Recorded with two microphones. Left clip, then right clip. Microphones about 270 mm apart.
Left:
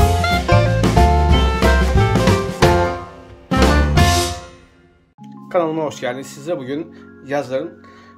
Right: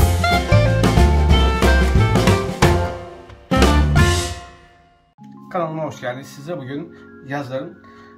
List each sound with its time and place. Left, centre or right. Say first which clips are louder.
0.0 s music: left 1 dB; centre
5.5 s speech: left 5 dB; left